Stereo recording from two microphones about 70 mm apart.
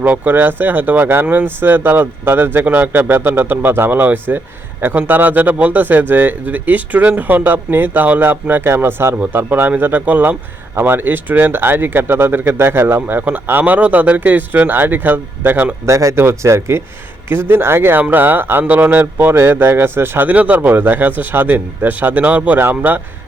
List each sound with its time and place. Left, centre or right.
0.0 s speech: right
15.9 s speech: right
16.1 s speech: right